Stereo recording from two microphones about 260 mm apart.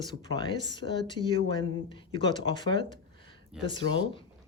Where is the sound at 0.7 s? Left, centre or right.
Centre.